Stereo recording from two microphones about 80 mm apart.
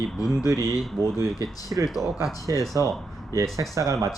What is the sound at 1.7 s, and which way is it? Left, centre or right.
Speech, right.